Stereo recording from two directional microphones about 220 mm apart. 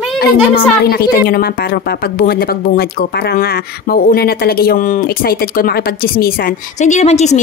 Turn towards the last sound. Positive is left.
turn(degrees=30)  # may be behind; listen again after turning